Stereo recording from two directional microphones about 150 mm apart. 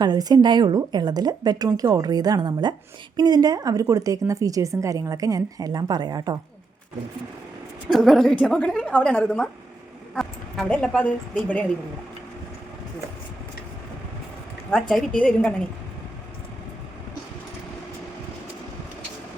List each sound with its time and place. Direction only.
0.0 s a woman's voice: 25° right (ahead or behind)
7.9 s a woman's voice: centre (ahead or behind)
14.7 s a woman's voice: centre (ahead or behind)